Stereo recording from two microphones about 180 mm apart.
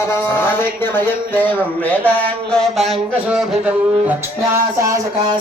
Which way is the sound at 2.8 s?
Centre (ahead or behind).